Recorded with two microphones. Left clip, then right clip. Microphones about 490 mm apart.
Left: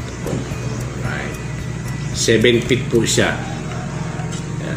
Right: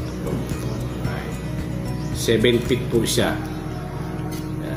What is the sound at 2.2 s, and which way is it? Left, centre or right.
Speech, right.